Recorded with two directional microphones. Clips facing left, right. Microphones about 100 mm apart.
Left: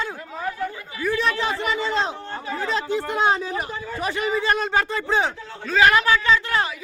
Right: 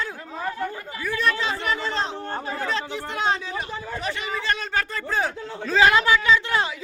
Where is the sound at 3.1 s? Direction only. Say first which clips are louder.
Left 3 dB; 35° left (ahead or behind).